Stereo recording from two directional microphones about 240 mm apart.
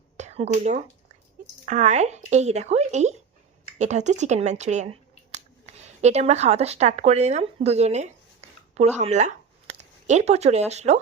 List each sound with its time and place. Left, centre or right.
0.2 s speech: right